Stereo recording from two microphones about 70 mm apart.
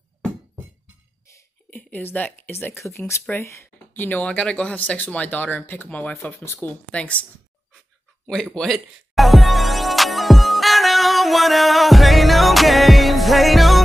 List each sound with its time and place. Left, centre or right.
1.7 s speech: left
2.5 s speech: left
4.3 s speech: centre
6.4 s speech: left
6.7 s speech: centre
8.3 s speech: centre
8.7 s music: centre